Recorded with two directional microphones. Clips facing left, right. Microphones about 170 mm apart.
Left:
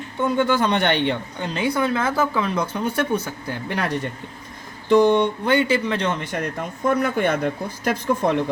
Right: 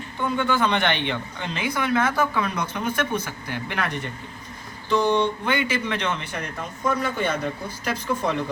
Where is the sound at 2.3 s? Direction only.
30° left (ahead or behind).